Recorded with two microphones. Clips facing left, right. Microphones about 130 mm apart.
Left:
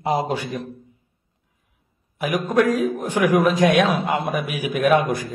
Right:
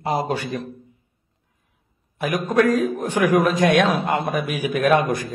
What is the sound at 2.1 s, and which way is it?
A man's voice, 10° left (ahead or behind).